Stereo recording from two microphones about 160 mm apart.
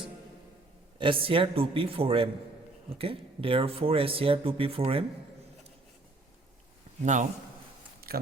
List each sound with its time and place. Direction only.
0.9 s speech: 35° right (ahead or behind)
7.0 s speech: 50° right (ahead or behind)
8.0 s a sound: 70° right (ahead or behind)